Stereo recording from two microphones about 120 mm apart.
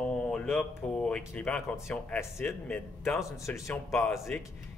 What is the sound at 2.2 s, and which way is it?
A man's voice, 20° left (ahead or behind).